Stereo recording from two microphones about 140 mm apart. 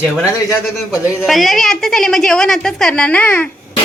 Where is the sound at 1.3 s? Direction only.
Centre (ahead or behind).